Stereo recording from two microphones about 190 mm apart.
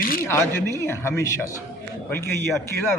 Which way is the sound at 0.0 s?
50° left (ahead or behind).